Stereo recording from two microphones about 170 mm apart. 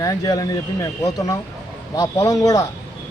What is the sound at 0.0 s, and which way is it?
A man's voice, 20° left (ahead or behind).